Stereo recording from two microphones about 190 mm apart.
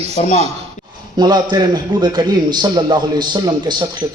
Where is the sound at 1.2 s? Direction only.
20° right (ahead or behind).